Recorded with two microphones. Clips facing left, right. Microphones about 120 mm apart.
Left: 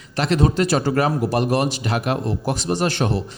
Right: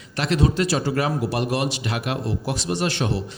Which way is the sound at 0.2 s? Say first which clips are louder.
Left 3 dB; 45° left (ahead or behind).